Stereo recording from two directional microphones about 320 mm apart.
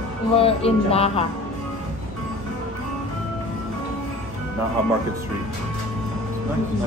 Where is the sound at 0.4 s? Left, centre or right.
Centre.